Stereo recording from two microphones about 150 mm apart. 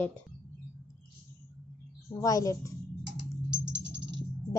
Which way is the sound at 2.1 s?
20° left (ahead or behind).